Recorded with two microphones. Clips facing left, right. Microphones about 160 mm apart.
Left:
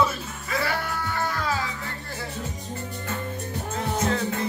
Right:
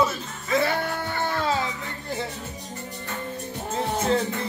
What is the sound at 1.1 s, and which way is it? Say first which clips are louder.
Music: right 3 dB; 25° right (ahead or behind).